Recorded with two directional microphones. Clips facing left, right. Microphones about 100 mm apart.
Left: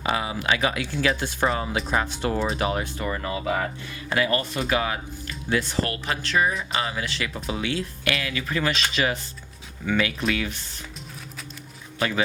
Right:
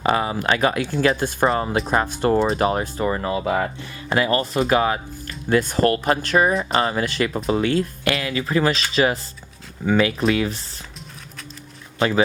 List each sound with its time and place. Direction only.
0.0 s speech: 45° right (ahead or behind)
11.9 s a man's voice: 35° right (ahead or behind)